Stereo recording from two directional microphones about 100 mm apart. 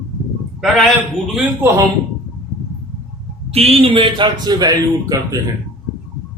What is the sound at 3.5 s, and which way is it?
Speech, 80° right.